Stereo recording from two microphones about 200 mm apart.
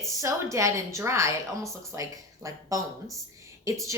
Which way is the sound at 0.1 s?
15° right (ahead or behind).